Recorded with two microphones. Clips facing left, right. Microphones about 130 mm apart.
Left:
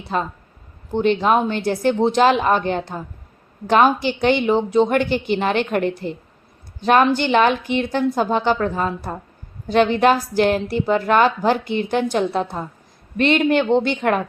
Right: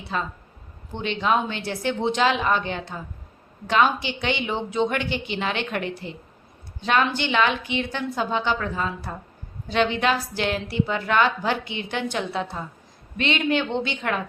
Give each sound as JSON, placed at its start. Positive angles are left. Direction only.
{"t": 0.9, "sound": "a woman's voice", "side_deg": 45}